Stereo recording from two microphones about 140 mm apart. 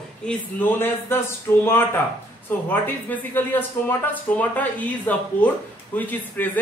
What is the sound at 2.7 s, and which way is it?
Speech, 10° left (ahead or behind).